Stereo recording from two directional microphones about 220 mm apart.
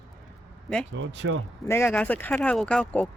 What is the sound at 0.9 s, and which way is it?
Speech, 55° right (ahead or behind).